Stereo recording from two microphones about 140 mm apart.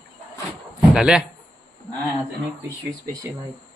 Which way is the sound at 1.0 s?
5° right (ahead or behind).